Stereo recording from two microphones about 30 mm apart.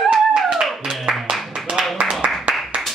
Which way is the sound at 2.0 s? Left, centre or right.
Right.